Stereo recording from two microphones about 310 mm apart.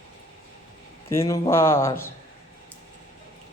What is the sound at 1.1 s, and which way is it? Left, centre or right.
Speech, centre.